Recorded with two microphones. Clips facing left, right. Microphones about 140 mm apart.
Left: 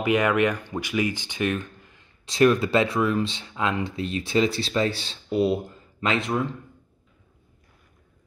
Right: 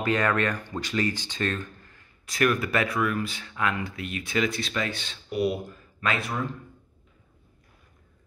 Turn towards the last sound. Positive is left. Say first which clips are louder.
# left 4 dB
turn(degrees=20)  # may be behind; listen again after turning